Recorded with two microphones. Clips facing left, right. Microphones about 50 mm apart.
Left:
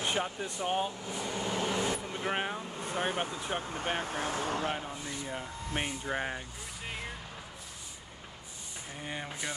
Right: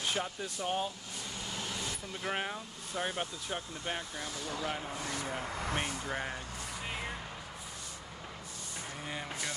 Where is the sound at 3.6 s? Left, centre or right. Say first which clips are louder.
Left 5 dB; left.